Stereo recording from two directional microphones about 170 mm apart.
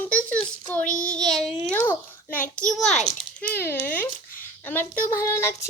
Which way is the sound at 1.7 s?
10° left (ahead or behind).